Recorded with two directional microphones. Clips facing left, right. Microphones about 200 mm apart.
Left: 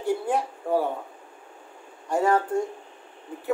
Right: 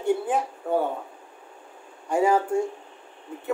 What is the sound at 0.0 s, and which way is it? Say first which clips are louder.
Speech: right 1 dB; centre (ahead or behind).